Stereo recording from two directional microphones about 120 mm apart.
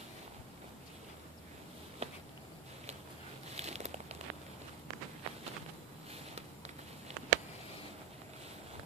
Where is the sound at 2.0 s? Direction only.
60° right (ahead or behind).